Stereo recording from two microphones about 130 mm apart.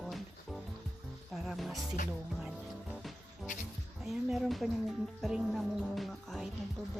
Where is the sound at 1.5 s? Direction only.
Centre (ahead or behind).